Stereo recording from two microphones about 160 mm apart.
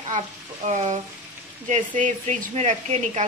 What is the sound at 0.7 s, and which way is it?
A woman's voice, 45° right (ahead or behind).